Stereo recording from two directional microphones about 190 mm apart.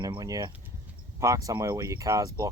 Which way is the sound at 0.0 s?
20° right (ahead or behind).